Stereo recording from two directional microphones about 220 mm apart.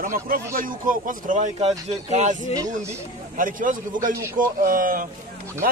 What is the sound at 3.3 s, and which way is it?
Speech, 40° right (ahead or behind).